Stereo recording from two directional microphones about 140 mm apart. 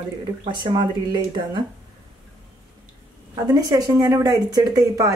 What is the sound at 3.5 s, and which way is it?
Speech, 25° right (ahead or behind).